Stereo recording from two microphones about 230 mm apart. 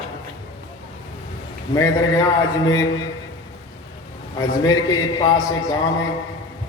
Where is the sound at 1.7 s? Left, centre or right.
Centre.